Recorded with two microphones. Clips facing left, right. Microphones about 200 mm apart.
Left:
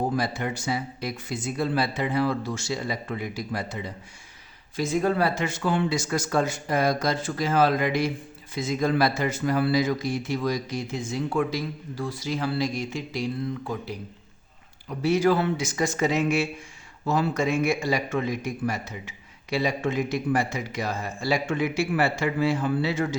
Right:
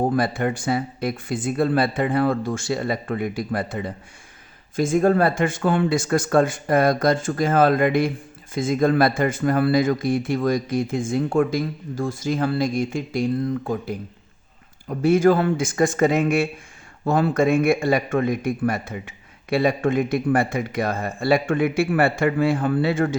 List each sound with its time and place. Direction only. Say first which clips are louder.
0.0 s a man's voice: right 6 dB; 55° right (ahead or behind)